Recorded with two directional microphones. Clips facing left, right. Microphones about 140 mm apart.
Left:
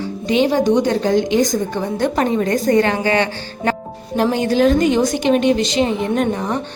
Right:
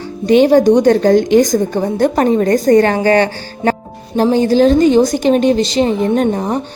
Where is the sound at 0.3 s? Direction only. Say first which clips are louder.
Right 7 dB; 50° right (ahead or behind).